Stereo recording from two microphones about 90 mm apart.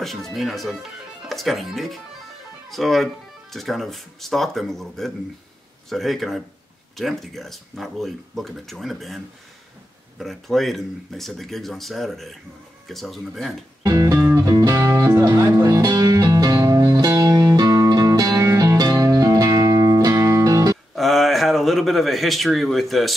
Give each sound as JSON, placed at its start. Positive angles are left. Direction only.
{"t": 0.0, "sound": "speech", "side_deg": 0}
{"t": 13.8, "sound": "music", "side_deg": -40}
{"t": 15.6, "sound": "music", "side_deg": -50}
{"t": 20.9, "sound": "a man's voice", "side_deg": 0}